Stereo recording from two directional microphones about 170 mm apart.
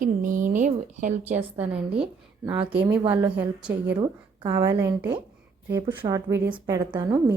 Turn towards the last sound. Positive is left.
turn(degrees=-20)  # may be behind; listen again after turning